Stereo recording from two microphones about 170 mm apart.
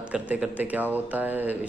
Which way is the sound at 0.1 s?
5° right (ahead or behind).